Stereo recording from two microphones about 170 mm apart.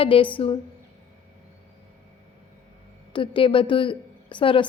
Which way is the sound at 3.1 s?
30° left (ahead or behind).